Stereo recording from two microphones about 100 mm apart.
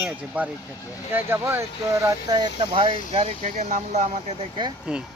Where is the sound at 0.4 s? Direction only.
15° right (ahead or behind).